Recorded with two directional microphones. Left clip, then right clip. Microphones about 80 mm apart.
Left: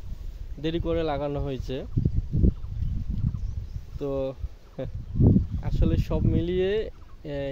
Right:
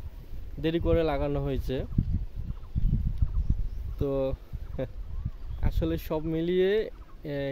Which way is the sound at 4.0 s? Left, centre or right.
Right.